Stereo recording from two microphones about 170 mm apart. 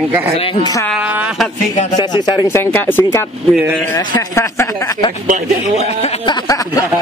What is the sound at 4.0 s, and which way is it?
Speech, 25° left (ahead or behind).